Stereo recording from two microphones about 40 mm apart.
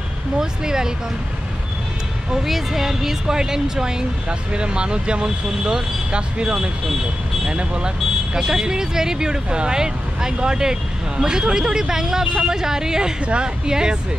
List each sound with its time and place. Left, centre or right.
0.4 s speech: centre
2.3 s speech: centre
13.2 s speech: right